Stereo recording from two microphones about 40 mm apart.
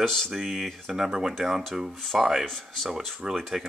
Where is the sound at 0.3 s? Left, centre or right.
Centre.